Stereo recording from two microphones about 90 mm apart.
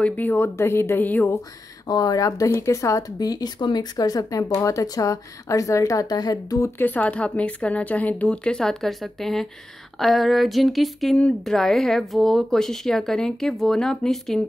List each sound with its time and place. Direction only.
0.0 s speech: 20° left (ahead or behind)
1.9 s speech: 45° left (ahead or behind)
6.8 s a woman's voice: 20° left (ahead or behind)